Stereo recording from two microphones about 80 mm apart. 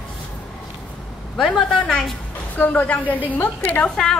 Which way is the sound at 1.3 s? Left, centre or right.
Centre.